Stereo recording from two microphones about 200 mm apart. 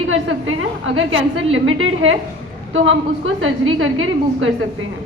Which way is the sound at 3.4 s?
75° right (ahead or behind).